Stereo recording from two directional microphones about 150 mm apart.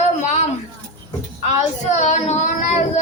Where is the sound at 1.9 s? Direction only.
50° left (ahead or behind).